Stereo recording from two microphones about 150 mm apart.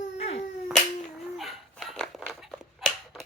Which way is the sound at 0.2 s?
40° left (ahead or behind).